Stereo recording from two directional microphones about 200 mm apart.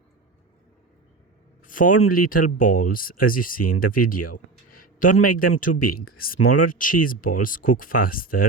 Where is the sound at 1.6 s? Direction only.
45° left (ahead or behind).